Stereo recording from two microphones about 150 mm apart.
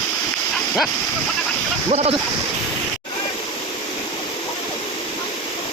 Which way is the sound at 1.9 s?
50° right (ahead or behind).